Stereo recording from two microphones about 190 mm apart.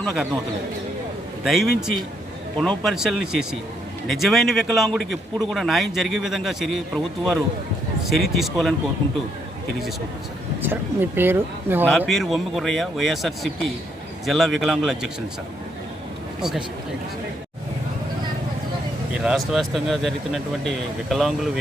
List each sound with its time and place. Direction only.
0.0 s a man's voice: centre (ahead or behind)
1.5 s a man's voice: centre (ahead or behind)
10.6 s speech: 10° right (ahead or behind)
11.9 s a man's voice: centre (ahead or behind)
19.1 s a man's voice: 5° right (ahead or behind)